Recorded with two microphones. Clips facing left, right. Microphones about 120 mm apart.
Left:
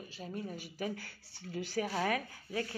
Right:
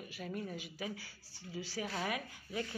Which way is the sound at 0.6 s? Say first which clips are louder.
Left 4 dB; 45° left (ahead or behind).